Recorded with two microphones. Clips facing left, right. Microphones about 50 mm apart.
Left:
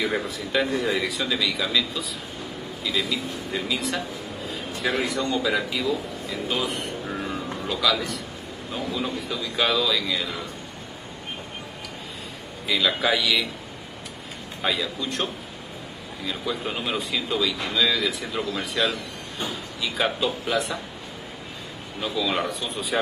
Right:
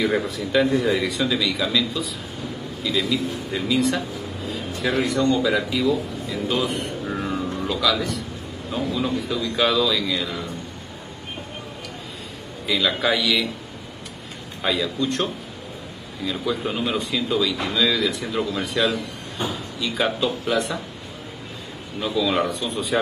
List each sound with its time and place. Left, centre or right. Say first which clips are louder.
0.0 s a man's voice: right 4 dB; centre
12.6 s a man's voice: right 1 dB; centre
14.6 s a man's voice: right 4 dB; centre
16.3 s a man's voice: right 4 dB; centre
22.0 s a man's voice: right 4 dB; centre